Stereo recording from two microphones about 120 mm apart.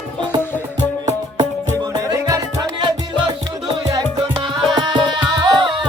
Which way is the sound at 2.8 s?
40° right (ahead or behind).